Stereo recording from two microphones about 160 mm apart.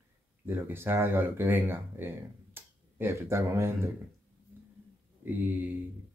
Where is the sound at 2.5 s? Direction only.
15° right (ahead or behind).